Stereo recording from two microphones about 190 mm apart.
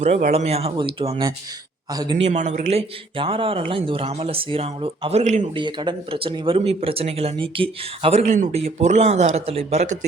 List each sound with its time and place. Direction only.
0.3 s a man's voice: 35° right (ahead or behind)
2.2 s speech: 35° right (ahead or behind)
5.5 s speech: 25° right (ahead or behind)